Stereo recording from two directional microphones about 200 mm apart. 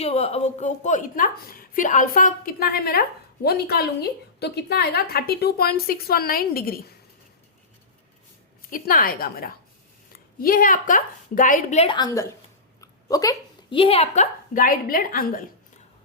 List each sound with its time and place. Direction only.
0.0 s a woman's voice: 30° left (ahead or behind); by 6.7 s 50° left (ahead or behind)
8.7 s a woman's voice: 45° left (ahead or behind)
11.9 s a woman's voice: 15° left (ahead or behind); by 15.4 s 45° left (ahead or behind)